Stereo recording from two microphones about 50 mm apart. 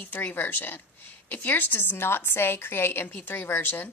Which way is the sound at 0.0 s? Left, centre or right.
Left.